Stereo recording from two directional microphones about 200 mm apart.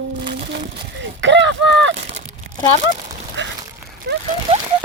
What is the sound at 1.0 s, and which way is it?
Speech, 65° right (ahead or behind).